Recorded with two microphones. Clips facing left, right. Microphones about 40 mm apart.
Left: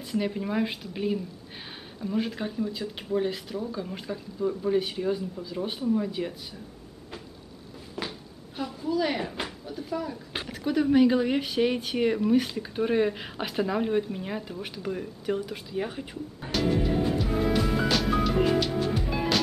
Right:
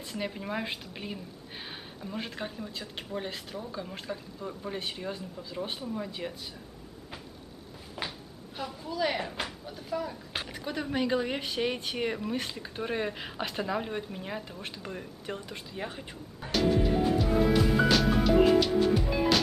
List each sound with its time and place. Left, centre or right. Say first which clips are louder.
0.0 s speech: left 6 dB; centre
8.0 s a sound: left 2 dB; centre
8.5 s speech: left 5 dB; centre